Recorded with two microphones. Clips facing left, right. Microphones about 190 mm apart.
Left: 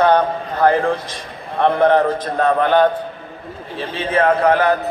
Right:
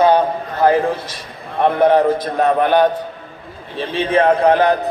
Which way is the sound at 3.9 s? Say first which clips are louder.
Right 2 dB; 20° right (ahead or behind).